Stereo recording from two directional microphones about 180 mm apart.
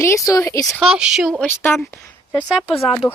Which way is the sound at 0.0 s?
15° left (ahead or behind).